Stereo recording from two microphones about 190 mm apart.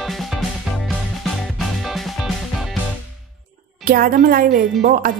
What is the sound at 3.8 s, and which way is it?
A woman's voice, 50° right (ahead or behind).